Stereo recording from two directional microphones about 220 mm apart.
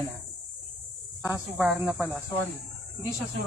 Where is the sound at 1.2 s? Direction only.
5° right (ahead or behind).